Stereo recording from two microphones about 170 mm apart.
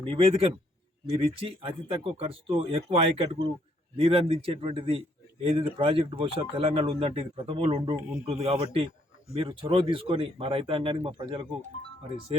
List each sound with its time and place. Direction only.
0.1 s a man's voice: 30° right (ahead or behind)